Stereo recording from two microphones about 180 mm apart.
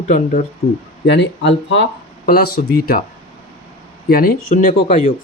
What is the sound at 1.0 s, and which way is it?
Speech, 75° left (ahead or behind).